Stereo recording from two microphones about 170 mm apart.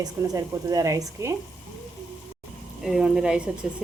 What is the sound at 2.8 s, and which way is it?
Speech, 5° right (ahead or behind).